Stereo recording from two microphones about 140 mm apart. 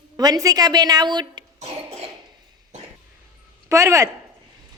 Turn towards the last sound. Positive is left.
turn(degrees=-20)  # may be behind; listen again after turning